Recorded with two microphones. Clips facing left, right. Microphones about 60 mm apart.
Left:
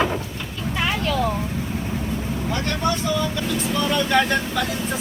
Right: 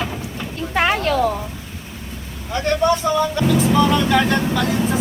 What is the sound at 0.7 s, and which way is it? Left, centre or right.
Vehicle, right.